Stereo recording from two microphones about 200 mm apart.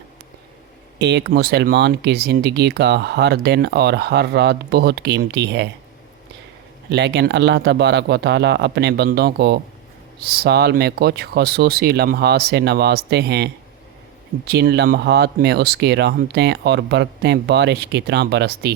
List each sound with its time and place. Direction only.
0.9 s speech: 55° right (ahead or behind)
6.9 s speech: 60° right (ahead or behind)